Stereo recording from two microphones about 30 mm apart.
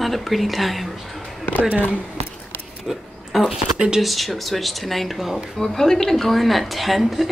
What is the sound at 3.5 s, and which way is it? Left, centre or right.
Speech, right.